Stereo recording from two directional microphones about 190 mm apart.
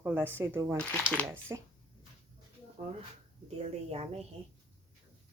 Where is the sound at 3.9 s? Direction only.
30° right (ahead or behind).